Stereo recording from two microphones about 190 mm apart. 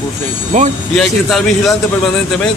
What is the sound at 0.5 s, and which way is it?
Speech, 40° right (ahead or behind).